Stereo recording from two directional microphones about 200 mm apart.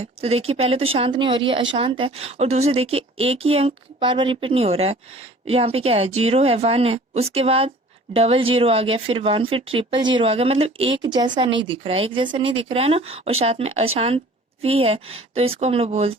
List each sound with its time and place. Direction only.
0.0 s speech: 30° right (ahead or behind)